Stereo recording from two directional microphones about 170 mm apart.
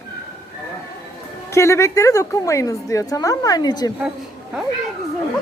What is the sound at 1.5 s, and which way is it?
A woman's voice, 15° left (ahead or behind).